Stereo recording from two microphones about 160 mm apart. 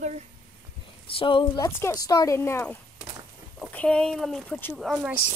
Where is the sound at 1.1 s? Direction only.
30° left (ahead or behind).